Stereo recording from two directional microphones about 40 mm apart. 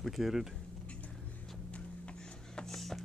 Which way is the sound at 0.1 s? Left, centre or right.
Centre.